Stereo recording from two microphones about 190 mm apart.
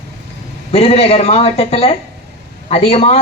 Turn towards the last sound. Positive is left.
turn(degrees=35)  # may be behind; listen again after turning